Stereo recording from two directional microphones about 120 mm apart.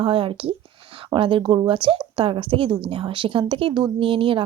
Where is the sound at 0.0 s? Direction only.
50° right (ahead or behind).